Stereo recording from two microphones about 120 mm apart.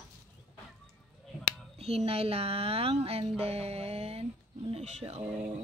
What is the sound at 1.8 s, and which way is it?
Speech, 60° right (ahead or behind).